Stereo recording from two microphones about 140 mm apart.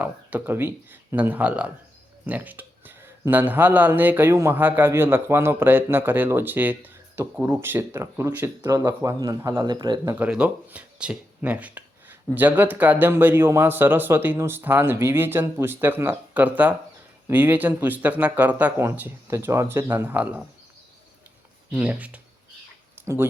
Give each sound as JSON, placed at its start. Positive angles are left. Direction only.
{"t": 0.0, "sound": "a man's voice", "side_deg": -10}
{"t": 9.6, "sound": "speech", "side_deg": -30}
{"t": 10.0, "sound": "speech", "side_deg": -15}
{"t": 21.7, "sound": "speech", "side_deg": -10}